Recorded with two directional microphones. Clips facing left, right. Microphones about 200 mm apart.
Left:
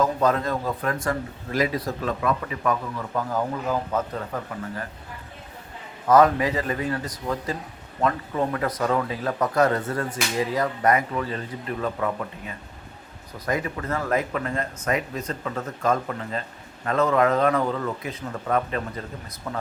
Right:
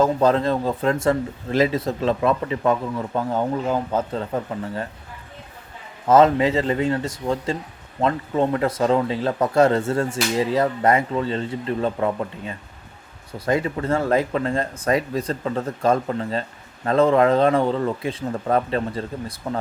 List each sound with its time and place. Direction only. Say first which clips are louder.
0.0 s speech: right 4 dB; 30° right (ahead or behind)
6.1 s speech: right 3 dB; 25° right (ahead or behind)